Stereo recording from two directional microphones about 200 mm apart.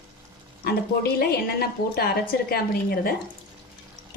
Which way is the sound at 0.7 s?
50° left (ahead or behind).